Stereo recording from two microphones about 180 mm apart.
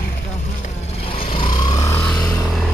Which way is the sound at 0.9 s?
30° left (ahead or behind).